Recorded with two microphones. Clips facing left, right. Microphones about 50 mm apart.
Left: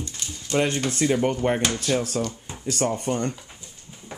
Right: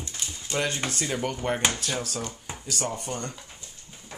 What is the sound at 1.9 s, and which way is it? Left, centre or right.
Speech, centre.